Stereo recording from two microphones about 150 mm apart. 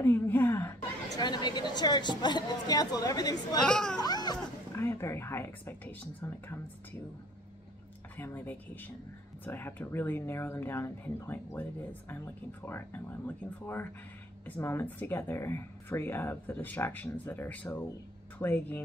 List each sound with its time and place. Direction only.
0.0 s a sound: 15° left (ahead or behind)
1.1 s a woman's voice: 30° left (ahead or behind)
3.6 s speech: 5° left (ahead or behind)
4.0 s a sound: 25° left (ahead or behind)
4.8 s speech: 15° left (ahead or behind)
8.2 s speech: 15° left (ahead or behind)